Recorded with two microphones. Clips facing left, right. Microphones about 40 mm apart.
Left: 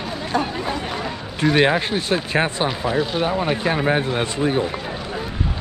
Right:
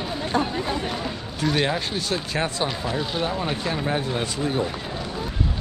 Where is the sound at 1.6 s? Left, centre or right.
Left.